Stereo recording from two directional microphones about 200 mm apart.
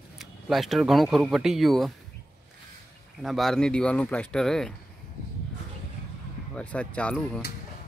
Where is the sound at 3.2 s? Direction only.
Centre (ahead or behind).